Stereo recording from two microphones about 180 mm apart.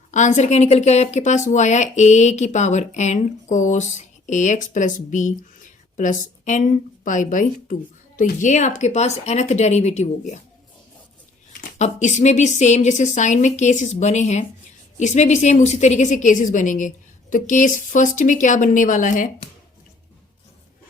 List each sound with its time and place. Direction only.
0.1 s speech: 40° left (ahead or behind)
11.8 s a woman's voice: 40° left (ahead or behind)